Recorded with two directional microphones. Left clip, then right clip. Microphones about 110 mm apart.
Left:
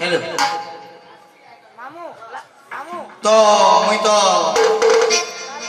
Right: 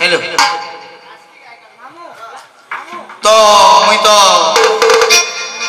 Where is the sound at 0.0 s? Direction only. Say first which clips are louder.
Right 7 dB; 15° left (ahead or behind).